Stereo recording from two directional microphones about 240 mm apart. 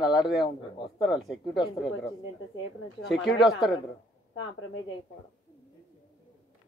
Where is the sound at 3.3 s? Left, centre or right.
Centre.